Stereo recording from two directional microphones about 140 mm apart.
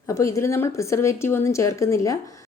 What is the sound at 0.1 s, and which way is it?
A woman's voice, 20° left (ahead or behind).